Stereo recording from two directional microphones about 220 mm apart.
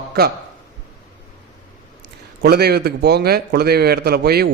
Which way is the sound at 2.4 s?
45° right (ahead or behind).